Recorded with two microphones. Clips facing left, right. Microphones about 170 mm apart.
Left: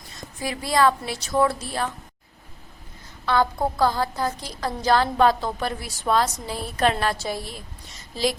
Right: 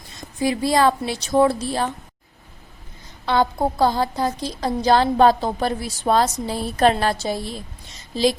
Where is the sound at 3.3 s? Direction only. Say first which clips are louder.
Right 2 dB; 20° right (ahead or behind).